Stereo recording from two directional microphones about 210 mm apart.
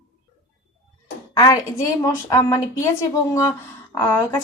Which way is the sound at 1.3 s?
15° left (ahead or behind).